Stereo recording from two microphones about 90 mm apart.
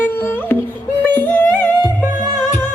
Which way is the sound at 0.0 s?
25° left (ahead or behind).